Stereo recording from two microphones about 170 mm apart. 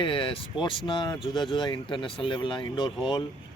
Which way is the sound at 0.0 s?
30° left (ahead or behind).